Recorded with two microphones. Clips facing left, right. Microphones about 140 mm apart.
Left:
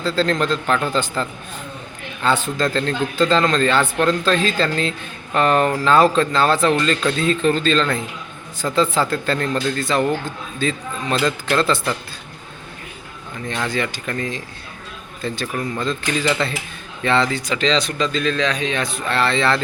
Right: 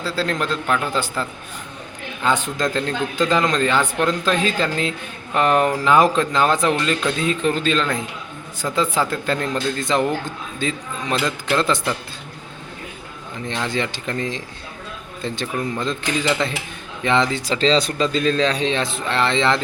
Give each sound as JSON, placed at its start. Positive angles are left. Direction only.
{"t": 0.0, "sound": "a man's voice", "side_deg": -10}
{"t": 13.5, "sound": "a man's voice", "side_deg": -20}
{"t": 17.4, "sound": "speech", "side_deg": -30}